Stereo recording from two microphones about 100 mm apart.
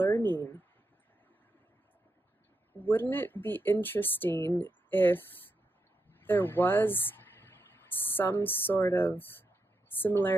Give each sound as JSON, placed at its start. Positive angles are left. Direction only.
{"t": 0.0, "sound": "speech", "side_deg": 20}
{"t": 2.8, "sound": "speech", "side_deg": 20}